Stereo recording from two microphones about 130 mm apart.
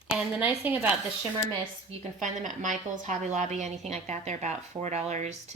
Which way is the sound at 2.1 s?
75° right (ahead or behind).